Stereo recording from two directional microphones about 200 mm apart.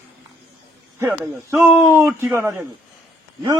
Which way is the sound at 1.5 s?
10° right (ahead or behind).